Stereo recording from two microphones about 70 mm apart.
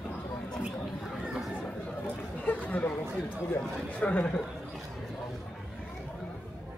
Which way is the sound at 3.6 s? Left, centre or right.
Centre.